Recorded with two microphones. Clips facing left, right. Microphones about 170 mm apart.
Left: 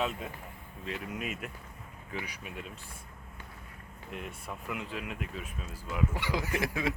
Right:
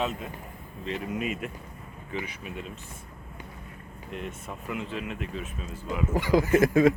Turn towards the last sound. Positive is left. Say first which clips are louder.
# right 12 dB
turn(degrees=-45)  # may be behind; listen again after turning